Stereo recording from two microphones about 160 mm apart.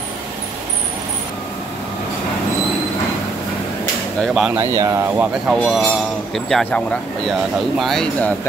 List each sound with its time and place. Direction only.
4.2 s speech: 5° right (ahead or behind)
4.6 s speech: 20° right (ahead or behind)
5.5 s speech: centre (ahead or behind)
7.8 s speech: 5° left (ahead or behind)